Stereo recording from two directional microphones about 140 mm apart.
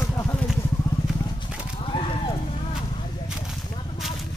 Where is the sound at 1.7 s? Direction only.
40° left (ahead or behind).